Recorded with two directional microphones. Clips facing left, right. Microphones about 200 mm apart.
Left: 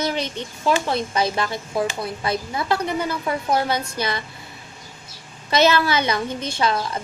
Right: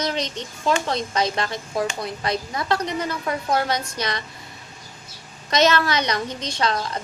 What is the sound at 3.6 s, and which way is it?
Speech, 5° left (ahead or behind).